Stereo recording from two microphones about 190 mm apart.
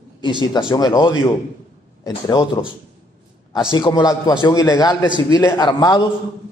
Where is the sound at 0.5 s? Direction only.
20° left (ahead or behind).